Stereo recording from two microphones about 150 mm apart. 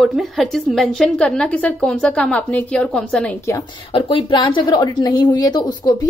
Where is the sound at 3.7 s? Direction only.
35° left (ahead or behind).